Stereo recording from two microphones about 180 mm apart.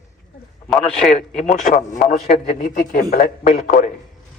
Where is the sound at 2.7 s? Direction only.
55° left (ahead or behind).